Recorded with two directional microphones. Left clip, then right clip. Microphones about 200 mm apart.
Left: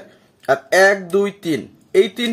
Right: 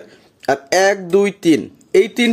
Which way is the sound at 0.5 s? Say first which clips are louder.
Left 1 dB; 45° right (ahead or behind).